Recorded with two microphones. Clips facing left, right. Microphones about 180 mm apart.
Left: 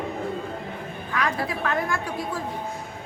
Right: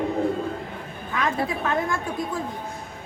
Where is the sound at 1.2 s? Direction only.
25° right (ahead or behind).